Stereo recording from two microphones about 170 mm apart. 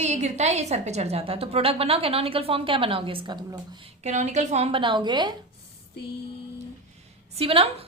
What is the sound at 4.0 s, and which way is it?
A woman's voice, 45° right (ahead or behind).